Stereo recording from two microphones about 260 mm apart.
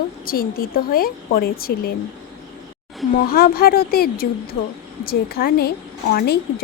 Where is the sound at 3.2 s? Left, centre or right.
Left.